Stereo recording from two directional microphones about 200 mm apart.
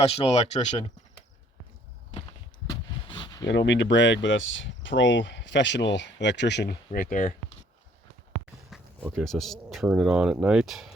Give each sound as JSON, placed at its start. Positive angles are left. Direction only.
{"t": 0.0, "sound": "speech", "side_deg": 30}
{"t": 2.6, "sound": "a sound", "side_deg": 20}
{"t": 3.4, "sound": "speech", "side_deg": 60}
{"t": 8.7, "sound": "speech", "side_deg": 0}